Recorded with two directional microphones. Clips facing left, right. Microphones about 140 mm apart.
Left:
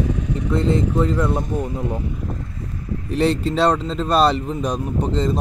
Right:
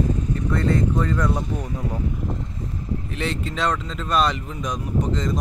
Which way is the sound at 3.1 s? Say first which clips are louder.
Left 11 dB; 35° left (ahead or behind).